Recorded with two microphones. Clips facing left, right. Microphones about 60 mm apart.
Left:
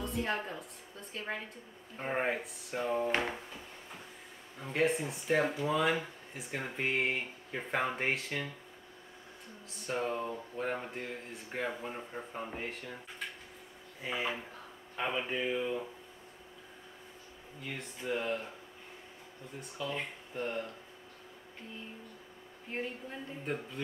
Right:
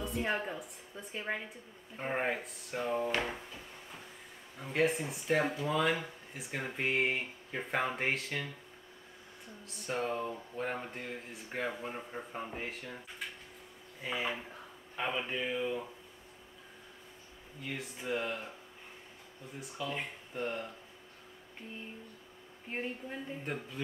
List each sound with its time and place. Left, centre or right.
0.2 s a woman's voice: centre
2.0 s speech: centre
4.6 s speech: centre
9.7 s speech: centre
14.0 s speech: centre
17.6 s speech: centre
19.6 s speech: centre
22.7 s a woman's voice: centre
23.4 s speech: centre